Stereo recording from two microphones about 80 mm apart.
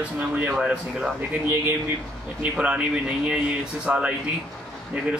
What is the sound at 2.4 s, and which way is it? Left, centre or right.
Speech, centre.